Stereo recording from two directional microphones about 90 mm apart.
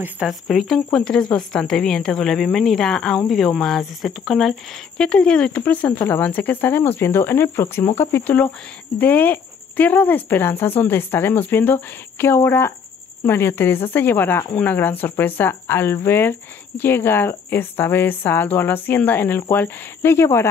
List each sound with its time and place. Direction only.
0.3 s speech: centre (ahead or behind); by 20.4 s 30° left (ahead or behind)